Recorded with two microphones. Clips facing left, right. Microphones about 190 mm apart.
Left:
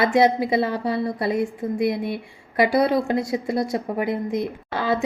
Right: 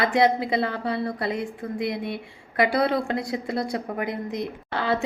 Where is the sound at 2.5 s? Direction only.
20° left (ahead or behind).